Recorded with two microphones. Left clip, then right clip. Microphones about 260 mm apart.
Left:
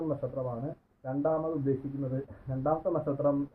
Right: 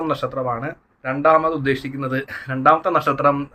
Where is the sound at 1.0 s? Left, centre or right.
Right.